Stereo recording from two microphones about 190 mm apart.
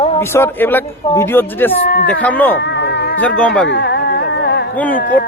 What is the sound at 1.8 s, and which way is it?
Speech, 55° left (ahead or behind).